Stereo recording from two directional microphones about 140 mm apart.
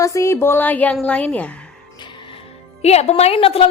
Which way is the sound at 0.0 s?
20° left (ahead or behind).